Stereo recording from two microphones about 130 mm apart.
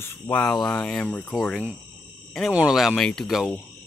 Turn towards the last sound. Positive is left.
turn(degrees=-5)  # may be behind; listen again after turning